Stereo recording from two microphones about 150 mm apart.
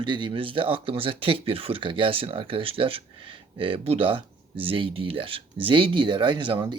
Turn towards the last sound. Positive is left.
turn(degrees=-30)  # may be behind; listen again after turning